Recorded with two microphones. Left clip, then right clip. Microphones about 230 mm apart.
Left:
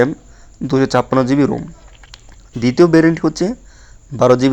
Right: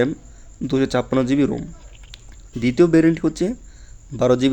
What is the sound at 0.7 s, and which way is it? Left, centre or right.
Speech, centre.